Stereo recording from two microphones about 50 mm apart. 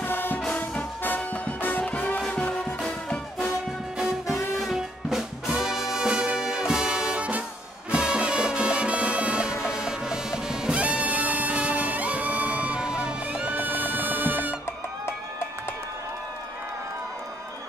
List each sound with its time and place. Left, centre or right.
0.0 s music: left
2.3 s music: left
4.6 s music: centre
10.8 s music: right
13.6 s music: right